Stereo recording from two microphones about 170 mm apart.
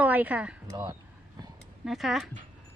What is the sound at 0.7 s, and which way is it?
Speech, 25° right (ahead or behind).